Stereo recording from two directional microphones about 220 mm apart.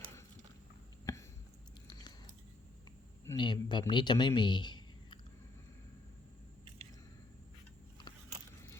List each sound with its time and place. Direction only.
1.1 s a sound: 15° left (ahead or behind)
1.9 s biting: 20° left (ahead or behind)
3.2 s a man's voice: 20° left (ahead or behind)